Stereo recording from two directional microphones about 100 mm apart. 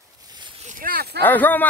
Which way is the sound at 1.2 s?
15° left (ahead or behind).